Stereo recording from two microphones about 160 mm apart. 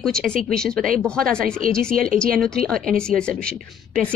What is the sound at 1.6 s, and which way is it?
Speech, 60° right (ahead or behind).